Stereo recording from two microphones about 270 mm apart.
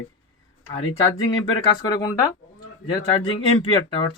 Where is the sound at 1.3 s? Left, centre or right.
Centre.